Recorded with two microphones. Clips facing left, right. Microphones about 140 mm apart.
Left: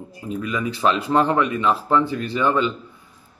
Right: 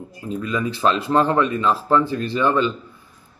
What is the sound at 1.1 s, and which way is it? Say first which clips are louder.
Speech: even; 15° left (ahead or behind).